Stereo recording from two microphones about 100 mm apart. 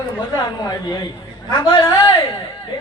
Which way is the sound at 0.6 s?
40° left (ahead or behind).